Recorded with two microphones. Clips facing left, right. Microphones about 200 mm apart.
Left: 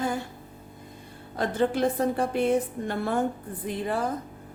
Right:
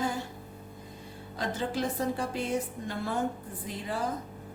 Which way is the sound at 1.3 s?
55° left (ahead or behind).